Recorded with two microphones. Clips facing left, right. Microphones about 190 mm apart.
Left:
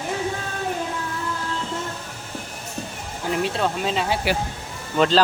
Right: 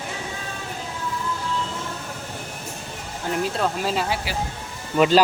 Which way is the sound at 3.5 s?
Centre (ahead or behind).